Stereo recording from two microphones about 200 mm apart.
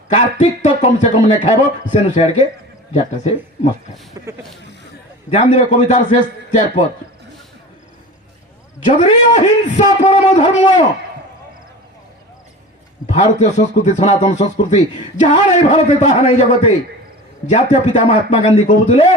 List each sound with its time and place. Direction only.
0.1 s a man's voice: 35° left (ahead or behind)
4.3 s speech: 15° right (ahead or behind)
5.3 s a man's voice: 35° left (ahead or behind)
8.8 s a man's voice: 35° left (ahead or behind)
13.1 s a man's voice: 35° left (ahead or behind)